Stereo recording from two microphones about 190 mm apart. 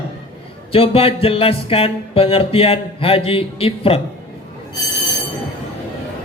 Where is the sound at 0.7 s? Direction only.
30° left (ahead or behind).